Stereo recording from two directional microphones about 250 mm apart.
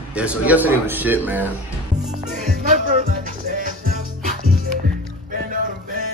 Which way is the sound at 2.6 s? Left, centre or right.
Right.